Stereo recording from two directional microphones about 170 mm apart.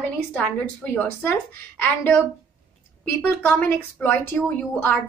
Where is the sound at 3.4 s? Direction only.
10° left (ahead or behind).